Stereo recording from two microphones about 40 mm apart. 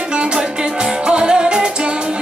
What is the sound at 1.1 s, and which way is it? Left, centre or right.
Music, right.